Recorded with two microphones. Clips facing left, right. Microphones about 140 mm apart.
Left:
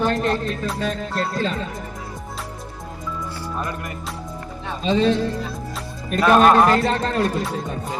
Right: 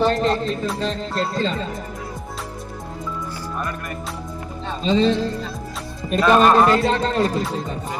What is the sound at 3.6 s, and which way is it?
Speech, 20° left (ahead or behind).